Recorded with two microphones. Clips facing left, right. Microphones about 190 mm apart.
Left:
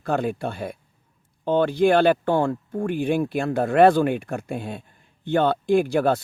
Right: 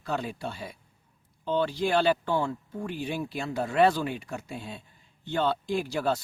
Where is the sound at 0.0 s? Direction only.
55° left (ahead or behind).